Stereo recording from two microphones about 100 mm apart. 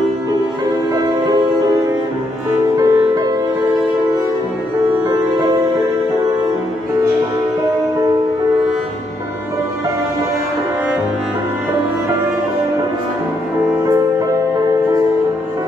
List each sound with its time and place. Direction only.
0.9 s music: 40° right (ahead or behind)
2.8 s music: 40° right (ahead or behind)
5.0 s music: 35° right (ahead or behind)
13.8 s music: 35° right (ahead or behind)